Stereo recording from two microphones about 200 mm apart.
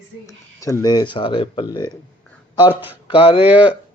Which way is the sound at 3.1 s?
25° left (ahead or behind).